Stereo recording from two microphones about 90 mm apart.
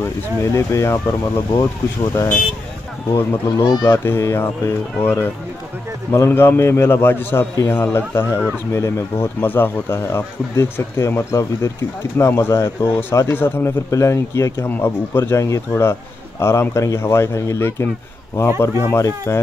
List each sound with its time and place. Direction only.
0.0 s speech: 30° left (ahead or behind)
3.1 s speech: 25° left (ahead or behind)
3.5 s speech: 45° left (ahead or behind)
3.8 s speech: 25° left (ahead or behind)